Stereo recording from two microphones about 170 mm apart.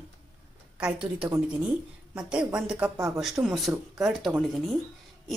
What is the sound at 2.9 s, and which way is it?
Speech, 15° right (ahead or behind).